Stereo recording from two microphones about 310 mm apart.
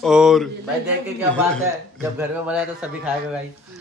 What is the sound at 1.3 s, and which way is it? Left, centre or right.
A man's voice, centre.